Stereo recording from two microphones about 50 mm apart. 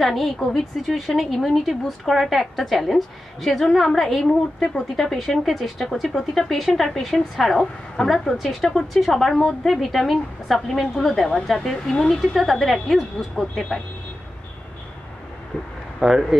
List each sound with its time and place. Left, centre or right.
0.0 s a woman's voice: centre
11.9 s a woman's voice: centre
12.2 s a woman's voice: centre
16.0 s a woman's voice: centre